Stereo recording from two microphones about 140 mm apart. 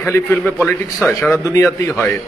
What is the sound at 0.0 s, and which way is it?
A man's voice, 15° left (ahead or behind).